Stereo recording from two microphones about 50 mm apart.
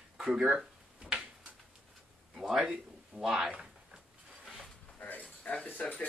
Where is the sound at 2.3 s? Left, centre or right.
Centre.